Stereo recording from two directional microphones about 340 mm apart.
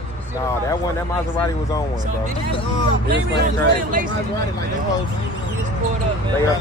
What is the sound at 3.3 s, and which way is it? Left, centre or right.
Speech, right.